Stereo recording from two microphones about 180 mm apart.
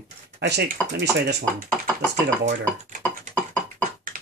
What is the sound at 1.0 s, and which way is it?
Speech, 65° right (ahead or behind).